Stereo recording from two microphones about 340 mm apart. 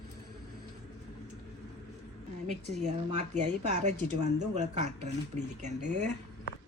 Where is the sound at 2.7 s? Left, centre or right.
Right.